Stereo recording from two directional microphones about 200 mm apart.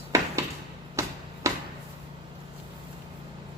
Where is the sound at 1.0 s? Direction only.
15° right (ahead or behind).